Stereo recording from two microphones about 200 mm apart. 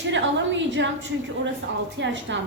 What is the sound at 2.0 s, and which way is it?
Speech, 65° right (ahead or behind).